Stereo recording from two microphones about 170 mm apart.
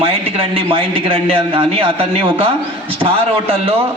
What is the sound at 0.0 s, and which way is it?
A man's voice, 35° right (ahead or behind).